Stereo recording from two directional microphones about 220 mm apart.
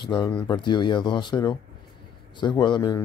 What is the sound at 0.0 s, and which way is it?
Speech, 20° left (ahead or behind).